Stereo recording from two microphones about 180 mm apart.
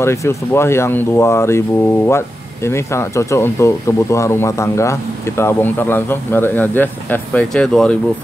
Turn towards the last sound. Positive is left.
turn(degrees=5)  # may be behind; listen again after turning